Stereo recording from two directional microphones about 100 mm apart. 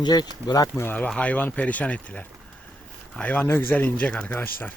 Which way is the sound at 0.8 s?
20° left (ahead or behind).